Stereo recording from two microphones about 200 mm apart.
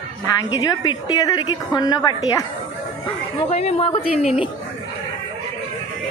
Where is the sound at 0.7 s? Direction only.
20° left (ahead or behind).